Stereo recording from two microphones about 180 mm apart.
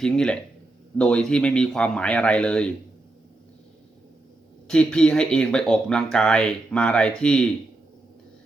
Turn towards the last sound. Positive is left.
turn(degrees=5)  # may be behind; listen again after turning